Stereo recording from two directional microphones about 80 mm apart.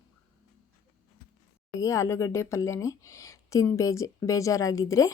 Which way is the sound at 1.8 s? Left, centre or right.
Left.